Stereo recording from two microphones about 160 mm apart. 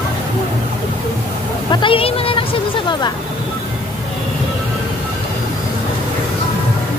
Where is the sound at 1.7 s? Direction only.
35° left (ahead or behind).